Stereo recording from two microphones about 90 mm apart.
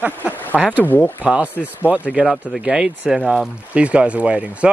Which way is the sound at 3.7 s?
15° right (ahead or behind).